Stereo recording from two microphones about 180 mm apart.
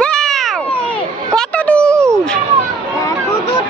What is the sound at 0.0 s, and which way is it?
Cat, 5° left (ahead or behind).